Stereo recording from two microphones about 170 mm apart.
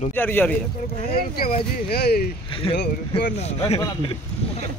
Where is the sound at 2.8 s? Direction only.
80° left.